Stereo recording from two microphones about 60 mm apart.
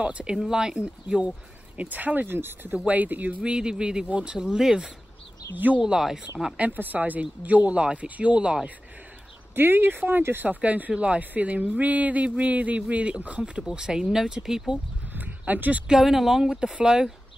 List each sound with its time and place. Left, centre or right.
0.0 s speech: centre; by 2.8 s right
2.8 s speech: right
3.5 s speech: centre
6.5 s speech: right
9.6 s speech: right; by 14.6 s centre
15.1 s a sound: right
15.9 s speech: centre